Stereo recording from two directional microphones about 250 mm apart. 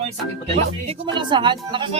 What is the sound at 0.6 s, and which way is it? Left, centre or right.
Speech, right.